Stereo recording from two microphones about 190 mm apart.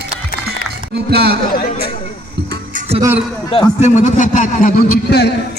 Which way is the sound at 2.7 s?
35° right (ahead or behind).